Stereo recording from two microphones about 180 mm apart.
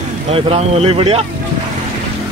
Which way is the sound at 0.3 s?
35° right (ahead or behind).